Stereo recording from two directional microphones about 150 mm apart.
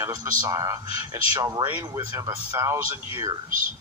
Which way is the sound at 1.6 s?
15° right (ahead or behind).